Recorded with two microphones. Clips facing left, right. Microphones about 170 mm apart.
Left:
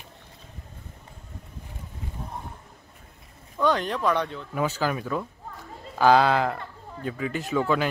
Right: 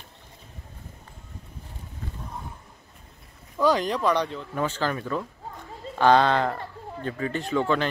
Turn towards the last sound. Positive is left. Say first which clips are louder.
# even
turn(degrees=5)  # may be behind; listen again after turning